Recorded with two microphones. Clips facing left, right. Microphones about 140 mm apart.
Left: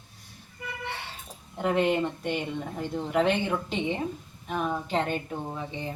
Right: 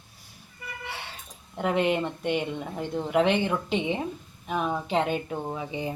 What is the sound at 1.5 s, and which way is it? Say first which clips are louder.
A woman's voice: even; centre (ahead or behind).